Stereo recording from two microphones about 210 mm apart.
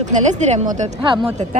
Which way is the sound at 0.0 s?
35° right (ahead or behind).